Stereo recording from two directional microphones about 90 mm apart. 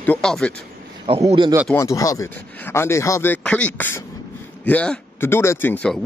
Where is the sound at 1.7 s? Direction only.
40° left (ahead or behind).